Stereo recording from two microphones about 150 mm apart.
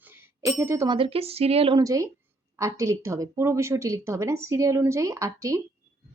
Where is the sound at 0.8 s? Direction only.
35° right (ahead or behind).